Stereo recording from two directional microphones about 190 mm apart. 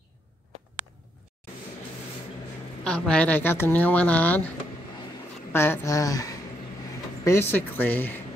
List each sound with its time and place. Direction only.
2.8 s speech: 5° left (ahead or behind)
5.5 s speech: 10° left (ahead or behind)